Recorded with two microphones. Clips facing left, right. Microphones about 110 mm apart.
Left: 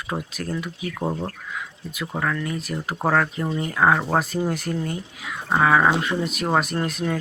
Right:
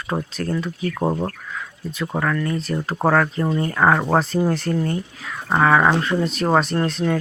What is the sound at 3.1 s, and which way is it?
Speech, 5° left (ahead or behind).